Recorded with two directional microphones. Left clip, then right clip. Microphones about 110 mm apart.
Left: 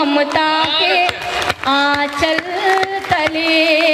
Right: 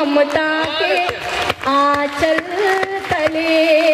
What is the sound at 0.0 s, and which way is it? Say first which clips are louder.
Speech: even; 30° left (ahead or behind).